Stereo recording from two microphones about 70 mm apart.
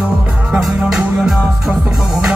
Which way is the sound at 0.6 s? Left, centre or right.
Centre.